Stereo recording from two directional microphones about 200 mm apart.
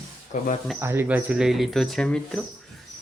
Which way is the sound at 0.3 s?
40° left (ahead or behind).